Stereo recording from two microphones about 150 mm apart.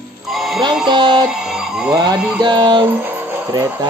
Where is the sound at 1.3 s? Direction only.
5° right (ahead or behind).